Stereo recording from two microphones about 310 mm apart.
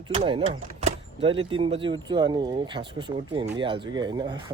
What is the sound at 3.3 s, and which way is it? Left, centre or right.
Speech, centre.